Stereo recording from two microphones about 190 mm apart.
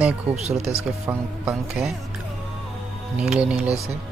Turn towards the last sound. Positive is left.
turn(degrees=-5)  # may be behind; listen again after turning